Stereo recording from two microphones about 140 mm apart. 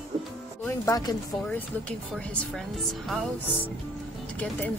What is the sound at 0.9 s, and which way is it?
Speech, 25° left (ahead or behind).